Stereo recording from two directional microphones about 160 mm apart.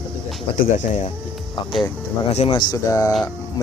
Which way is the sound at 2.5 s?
20° left (ahead or behind).